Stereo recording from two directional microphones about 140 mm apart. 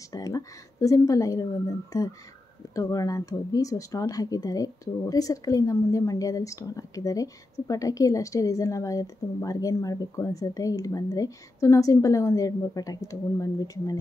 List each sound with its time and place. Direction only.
0.1 s a woman's voice: 25° left (ahead or behind)